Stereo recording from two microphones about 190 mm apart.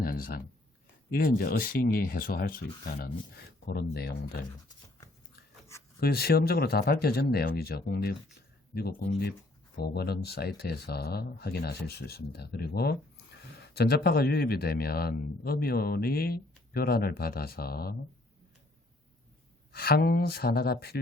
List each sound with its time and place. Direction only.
0.0 s a sound: 50° left (ahead or behind)
1.1 s speech: 50° left (ahead or behind)
6.0 s speech: 55° left (ahead or behind)
19.7 s speech: 55° left (ahead or behind)